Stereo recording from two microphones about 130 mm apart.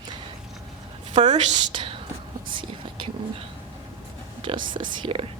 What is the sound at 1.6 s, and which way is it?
Speech, 40° right (ahead or behind).